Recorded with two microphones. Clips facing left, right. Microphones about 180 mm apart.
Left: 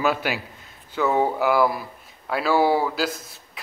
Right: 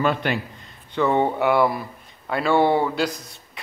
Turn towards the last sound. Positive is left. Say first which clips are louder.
# left 1 dB
turn(degrees=0)  # may be behind; listen again after turning